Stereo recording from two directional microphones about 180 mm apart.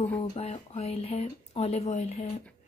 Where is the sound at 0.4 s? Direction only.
35° left (ahead or behind).